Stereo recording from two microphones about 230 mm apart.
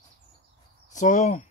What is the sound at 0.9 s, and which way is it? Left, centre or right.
Speech, left.